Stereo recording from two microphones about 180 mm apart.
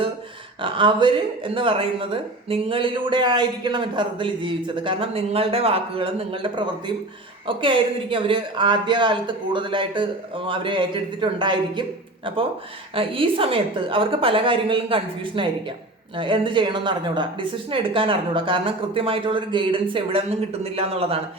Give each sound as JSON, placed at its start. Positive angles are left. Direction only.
{"t": 0.6, "sound": "a woman's voice", "side_deg": -30}